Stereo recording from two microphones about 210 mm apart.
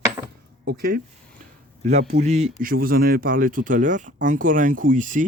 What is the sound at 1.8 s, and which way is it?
Speech, 35° right (ahead or behind).